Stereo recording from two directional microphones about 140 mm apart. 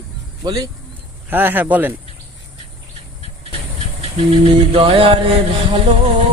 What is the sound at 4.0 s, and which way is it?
Vehicle, 45° right (ahead or behind).